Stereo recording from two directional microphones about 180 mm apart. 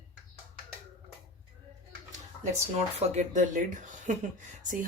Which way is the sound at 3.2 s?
40° right (ahead or behind).